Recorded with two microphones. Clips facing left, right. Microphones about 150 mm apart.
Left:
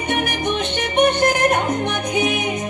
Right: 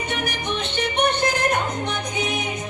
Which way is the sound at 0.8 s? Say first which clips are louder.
Left 5 dB; 55° left (ahead or behind).